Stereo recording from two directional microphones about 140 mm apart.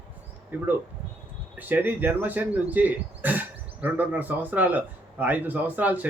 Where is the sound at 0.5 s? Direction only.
15° right (ahead or behind).